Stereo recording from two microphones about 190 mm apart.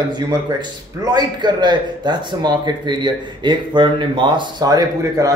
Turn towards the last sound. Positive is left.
turn(degrees=-20)  # may be behind; listen again after turning